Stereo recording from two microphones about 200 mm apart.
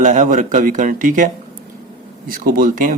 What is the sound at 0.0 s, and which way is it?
Speech, 40° right (ahead or behind).